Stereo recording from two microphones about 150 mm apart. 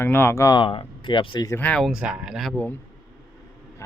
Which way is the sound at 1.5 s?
10° left (ahead or behind).